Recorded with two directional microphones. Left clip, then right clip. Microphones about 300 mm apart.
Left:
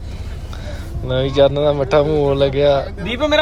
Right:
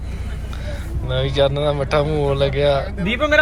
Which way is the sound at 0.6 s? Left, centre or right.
Centre.